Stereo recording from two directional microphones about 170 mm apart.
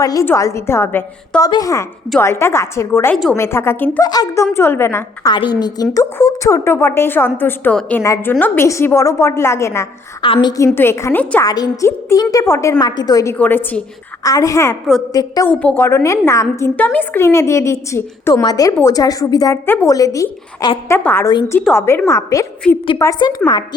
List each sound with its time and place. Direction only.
0.0 s a woman's voice: 20° left (ahead or behind)
4.0 s a woman's voice: 20° left (ahead or behind)
5.3 s a woman's voice: 25° left (ahead or behind)
10.2 s a woman's voice: 30° left (ahead or behind)
10.8 s a woman's voice: 15° left (ahead or behind)
11.4 s a woman's voice: 20° left (ahead or behind)
13.3 s a woman's voice: 10° left (ahead or behind)
15.4 s a woman's voice: 10° left (ahead or behind)